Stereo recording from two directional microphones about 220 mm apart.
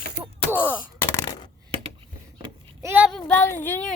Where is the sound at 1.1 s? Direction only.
20° left (ahead or behind).